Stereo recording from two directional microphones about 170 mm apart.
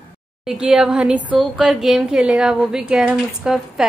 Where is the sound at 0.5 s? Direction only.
5° right (ahead or behind).